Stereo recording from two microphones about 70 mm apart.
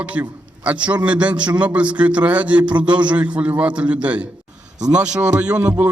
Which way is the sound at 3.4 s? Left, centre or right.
Right.